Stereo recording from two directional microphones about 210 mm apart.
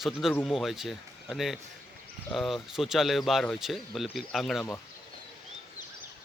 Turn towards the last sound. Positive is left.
turn(degrees=5)  # may be behind; listen again after turning